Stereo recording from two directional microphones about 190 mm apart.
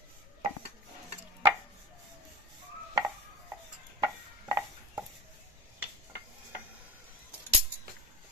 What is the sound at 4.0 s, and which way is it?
Chopping, 20° right (ahead or behind).